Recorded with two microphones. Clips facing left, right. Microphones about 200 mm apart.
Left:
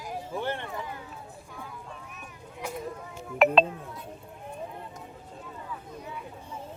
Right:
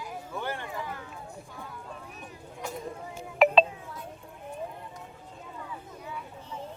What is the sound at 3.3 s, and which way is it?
Speech, centre (ahead or behind).